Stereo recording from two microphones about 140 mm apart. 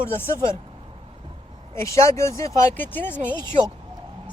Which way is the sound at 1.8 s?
20° left (ahead or behind).